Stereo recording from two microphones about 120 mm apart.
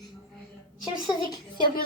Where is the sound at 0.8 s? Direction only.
35° left (ahead or behind).